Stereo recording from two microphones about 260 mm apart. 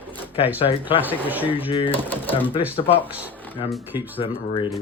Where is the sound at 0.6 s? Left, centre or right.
Left.